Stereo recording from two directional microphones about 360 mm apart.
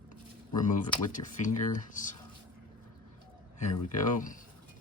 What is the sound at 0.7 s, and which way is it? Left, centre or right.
Speech, left.